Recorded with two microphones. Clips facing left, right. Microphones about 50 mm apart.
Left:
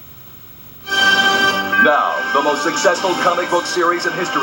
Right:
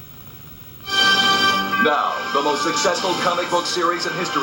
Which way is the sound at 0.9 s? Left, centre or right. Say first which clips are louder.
Left 4 dB; left.